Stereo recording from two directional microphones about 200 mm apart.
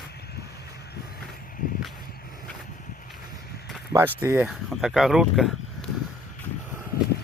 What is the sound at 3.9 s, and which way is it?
Speech, 10° right (ahead or behind).